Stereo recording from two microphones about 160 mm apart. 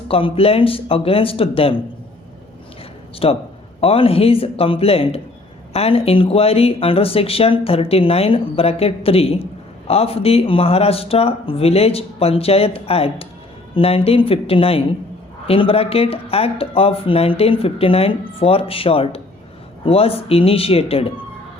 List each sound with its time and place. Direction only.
0.1 s speech: 35° left (ahead or behind)
3.2 s speech: 35° left (ahead or behind)